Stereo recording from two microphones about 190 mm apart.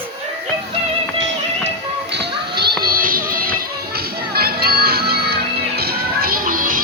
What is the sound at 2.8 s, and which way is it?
Music, 50° right (ahead or behind).